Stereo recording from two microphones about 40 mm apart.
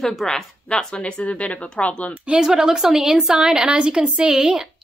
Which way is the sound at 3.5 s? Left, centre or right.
Right.